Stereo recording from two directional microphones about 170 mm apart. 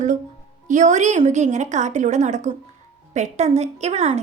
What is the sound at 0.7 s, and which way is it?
A woman's voice, 45° right (ahead or behind).